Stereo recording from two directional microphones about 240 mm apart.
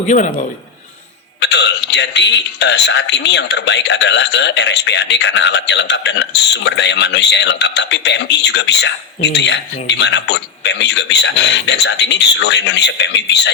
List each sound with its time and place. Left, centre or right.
1.4 s a man's voice: left